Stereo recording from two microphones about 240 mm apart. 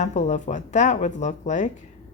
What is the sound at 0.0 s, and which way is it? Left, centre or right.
A woman's voice, left.